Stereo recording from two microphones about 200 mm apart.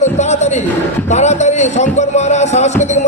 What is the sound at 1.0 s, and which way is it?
Speech, 35° left (ahead or behind).